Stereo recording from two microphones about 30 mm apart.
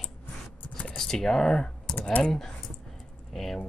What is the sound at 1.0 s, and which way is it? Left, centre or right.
Speech, centre.